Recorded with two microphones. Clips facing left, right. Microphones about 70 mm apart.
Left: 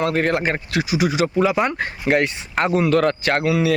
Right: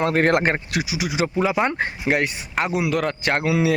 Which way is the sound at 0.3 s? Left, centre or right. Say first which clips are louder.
Right 2 dB; right.